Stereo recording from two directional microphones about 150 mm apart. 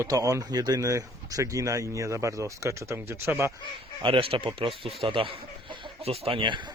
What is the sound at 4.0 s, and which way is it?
Speech, 35° right (ahead or behind).